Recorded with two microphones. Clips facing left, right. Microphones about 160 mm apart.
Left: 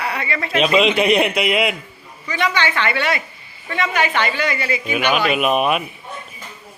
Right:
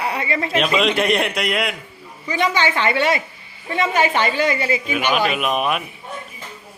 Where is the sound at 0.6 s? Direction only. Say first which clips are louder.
Left 3 dB; centre (ahead or behind).